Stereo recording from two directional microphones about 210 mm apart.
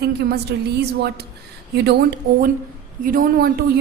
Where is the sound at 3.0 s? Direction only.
40° right (ahead or behind).